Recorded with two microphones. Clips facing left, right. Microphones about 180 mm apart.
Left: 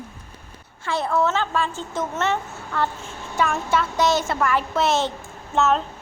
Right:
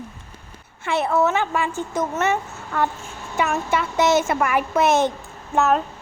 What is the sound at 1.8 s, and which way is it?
Child singing, 15° right (ahead or behind).